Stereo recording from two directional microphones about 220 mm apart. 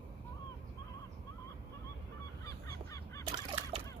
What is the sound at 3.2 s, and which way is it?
Fowl, 20° right (ahead or behind).